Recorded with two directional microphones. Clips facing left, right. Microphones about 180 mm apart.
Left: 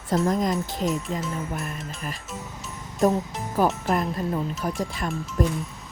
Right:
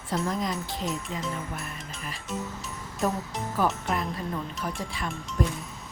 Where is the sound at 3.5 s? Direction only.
40° left (ahead or behind).